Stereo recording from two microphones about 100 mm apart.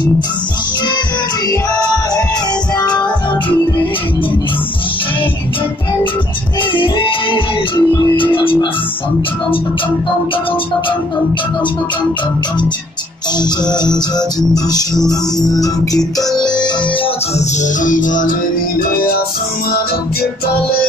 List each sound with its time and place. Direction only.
2.8 s music: 45° left (ahead or behind)
6.7 s music: 60° left (ahead or behind)
13.4 s music: 45° left (ahead or behind)